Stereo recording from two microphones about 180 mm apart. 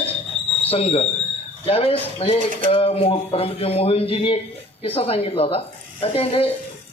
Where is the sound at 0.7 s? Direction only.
35° left (ahead or behind).